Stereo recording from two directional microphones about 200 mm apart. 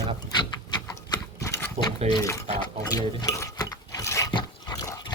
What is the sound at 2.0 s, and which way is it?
Speech, 20° left (ahead or behind).